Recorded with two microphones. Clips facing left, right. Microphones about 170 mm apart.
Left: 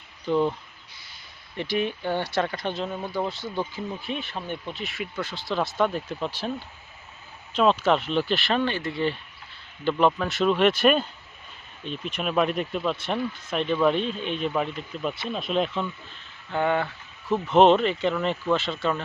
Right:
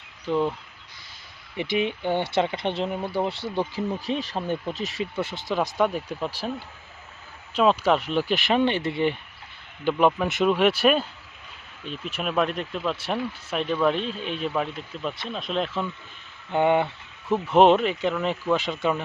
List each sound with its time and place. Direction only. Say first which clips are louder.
0.3 s speech: left 1 dB; centre (ahead or behind)
1.5 s speech: right 1 dB; 20° right (ahead or behind); by 5.0 s 40° right (ahead or behind)
5.1 s speech: right 1 dB; 20° right (ahead or behind)
7.5 s speech: even; 5° right (ahead or behind)
9.8 s speech: right 1 dB; 10° right (ahead or behind)
16.5 s speech: right 4 dB; 20° right (ahead or behind)
17.4 s speech: even; 10° right (ahead or behind)